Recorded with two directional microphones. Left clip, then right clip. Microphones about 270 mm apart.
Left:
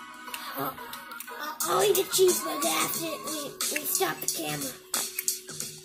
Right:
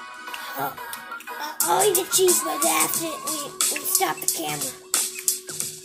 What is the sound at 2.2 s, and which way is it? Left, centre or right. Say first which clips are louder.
Music: right 3 dB; right.